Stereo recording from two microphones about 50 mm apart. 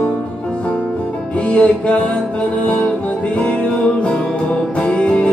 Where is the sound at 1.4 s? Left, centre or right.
Left.